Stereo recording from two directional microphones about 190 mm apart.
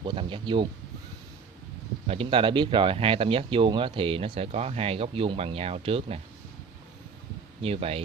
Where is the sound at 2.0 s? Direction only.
30° right (ahead or behind).